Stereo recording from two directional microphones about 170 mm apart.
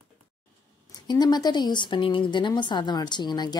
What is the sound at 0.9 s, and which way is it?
A woman's voice, 25° left (ahead or behind).